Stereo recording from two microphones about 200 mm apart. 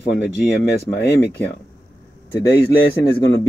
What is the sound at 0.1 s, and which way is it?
Speech, 55° left (ahead or behind).